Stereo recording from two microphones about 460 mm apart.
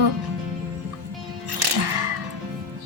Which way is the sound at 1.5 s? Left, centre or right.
Right.